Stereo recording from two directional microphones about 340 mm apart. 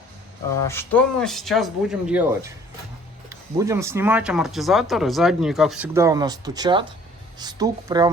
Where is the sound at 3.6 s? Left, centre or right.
Centre.